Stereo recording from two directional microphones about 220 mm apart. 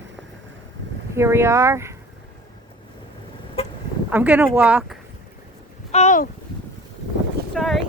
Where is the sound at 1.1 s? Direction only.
10° right (ahead or behind).